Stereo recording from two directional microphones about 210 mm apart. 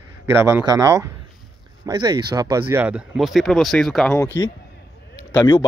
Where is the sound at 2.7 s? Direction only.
5° right (ahead or behind).